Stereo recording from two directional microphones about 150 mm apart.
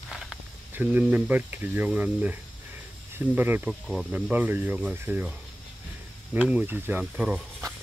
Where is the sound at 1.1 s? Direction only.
10° right (ahead or behind).